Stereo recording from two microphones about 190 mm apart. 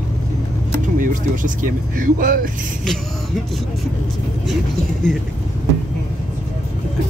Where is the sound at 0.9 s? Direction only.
45° right (ahead or behind).